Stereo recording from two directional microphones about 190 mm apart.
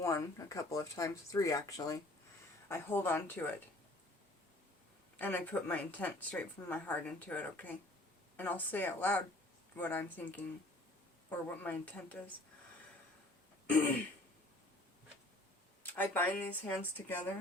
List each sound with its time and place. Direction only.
0.0 s speech: 15° left (ahead or behind)
5.1 s speech: 10° left (ahead or behind)
13.7 s throat clearing: 10° left (ahead or behind)
15.8 s speech: 10° left (ahead or behind)